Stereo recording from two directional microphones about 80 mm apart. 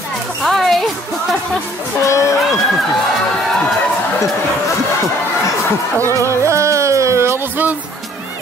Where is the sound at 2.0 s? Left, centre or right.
Left.